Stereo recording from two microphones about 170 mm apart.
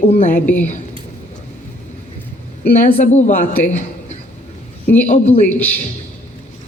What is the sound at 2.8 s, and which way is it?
A woman's voice, 45° left (ahead or behind).